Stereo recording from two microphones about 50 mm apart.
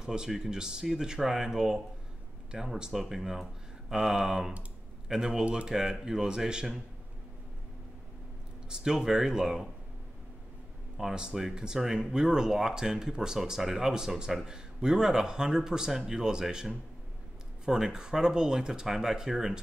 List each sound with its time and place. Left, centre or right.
0.0 s speech: centre
5.4 s speech: right
5.7 s speech: centre
8.6 s speech: centre
11.0 s speech: centre